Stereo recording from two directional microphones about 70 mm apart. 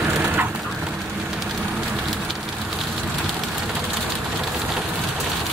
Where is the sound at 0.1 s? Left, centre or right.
Right.